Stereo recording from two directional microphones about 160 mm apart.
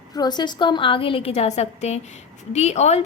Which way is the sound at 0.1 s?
25° left (ahead or behind).